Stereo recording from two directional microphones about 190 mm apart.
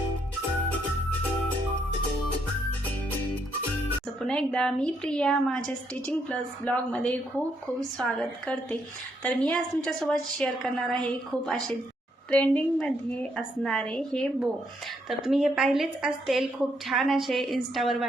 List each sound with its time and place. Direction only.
4.2 s a woman's voice: 5° left (ahead or behind)